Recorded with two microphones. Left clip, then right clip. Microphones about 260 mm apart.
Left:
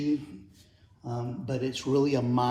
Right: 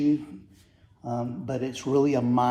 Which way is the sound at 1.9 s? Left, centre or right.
Right.